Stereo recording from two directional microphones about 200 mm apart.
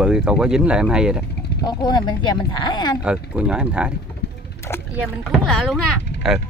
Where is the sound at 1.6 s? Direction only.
20° left (ahead or behind).